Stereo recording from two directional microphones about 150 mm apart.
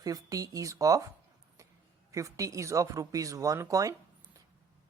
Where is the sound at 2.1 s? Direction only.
20° right (ahead or behind).